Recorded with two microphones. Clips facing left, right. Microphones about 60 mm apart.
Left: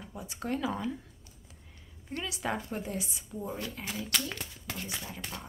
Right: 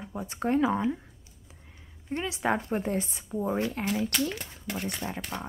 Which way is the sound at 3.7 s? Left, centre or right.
Right.